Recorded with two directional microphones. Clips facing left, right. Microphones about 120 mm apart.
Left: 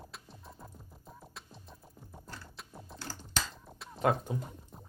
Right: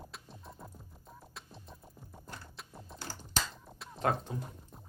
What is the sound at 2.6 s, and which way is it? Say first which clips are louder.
Typing: left 1 dB; centre (ahead or behind).